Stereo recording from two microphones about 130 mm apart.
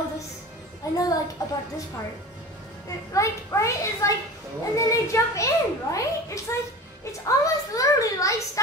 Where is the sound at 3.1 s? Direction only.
25° left (ahead or behind).